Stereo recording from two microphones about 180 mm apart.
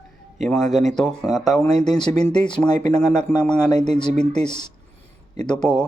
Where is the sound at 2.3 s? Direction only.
25° left (ahead or behind).